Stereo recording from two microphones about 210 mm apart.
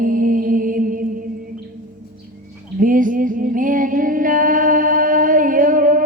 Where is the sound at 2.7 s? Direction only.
40° right (ahead or behind).